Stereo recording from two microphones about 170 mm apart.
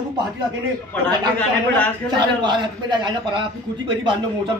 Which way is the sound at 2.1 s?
25° right (ahead or behind).